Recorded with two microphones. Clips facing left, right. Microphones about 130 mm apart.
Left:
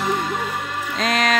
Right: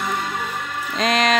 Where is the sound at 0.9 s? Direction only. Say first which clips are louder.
Right 2 dB; centre (ahead or behind).